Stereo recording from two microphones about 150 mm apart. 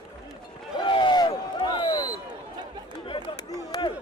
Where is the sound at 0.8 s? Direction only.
35° left (ahead or behind).